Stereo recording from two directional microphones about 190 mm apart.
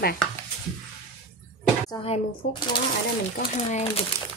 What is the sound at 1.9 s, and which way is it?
Speech, 25° left (ahead or behind).